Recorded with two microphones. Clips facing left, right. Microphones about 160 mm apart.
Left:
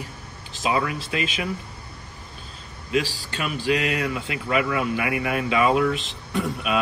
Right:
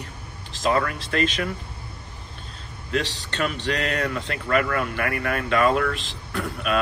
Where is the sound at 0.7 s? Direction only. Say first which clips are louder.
Right 1 dB; 50° right (ahead or behind).